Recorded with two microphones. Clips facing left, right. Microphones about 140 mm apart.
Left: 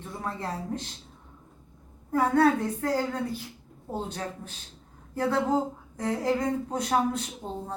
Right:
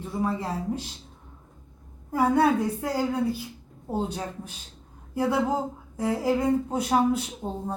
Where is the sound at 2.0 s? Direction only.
10° right (ahead or behind).